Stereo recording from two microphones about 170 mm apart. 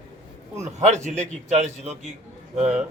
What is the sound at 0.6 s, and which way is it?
A man's voice, 45° right (ahead or behind).